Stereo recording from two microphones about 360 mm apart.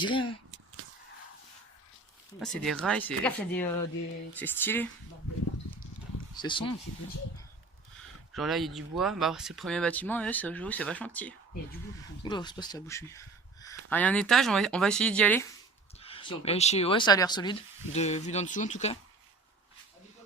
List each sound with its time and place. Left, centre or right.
0.0 s speech: centre
2.4 s speech: centre
6.3 s speech: centre
8.3 s speech: centre
16.0 s speech: centre